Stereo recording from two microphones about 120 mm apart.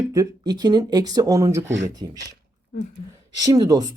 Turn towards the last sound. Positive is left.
turn(degrees=-30)  # may be behind; listen again after turning